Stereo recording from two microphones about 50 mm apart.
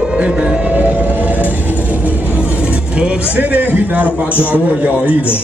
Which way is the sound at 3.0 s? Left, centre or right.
Right.